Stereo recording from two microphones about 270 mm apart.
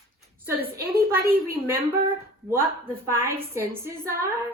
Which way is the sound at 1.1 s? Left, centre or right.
Centre.